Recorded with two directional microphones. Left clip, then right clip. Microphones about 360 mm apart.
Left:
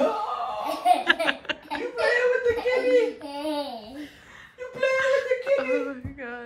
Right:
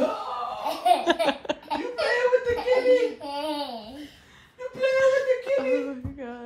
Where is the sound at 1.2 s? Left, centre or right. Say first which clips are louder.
Right 1 dB; centre.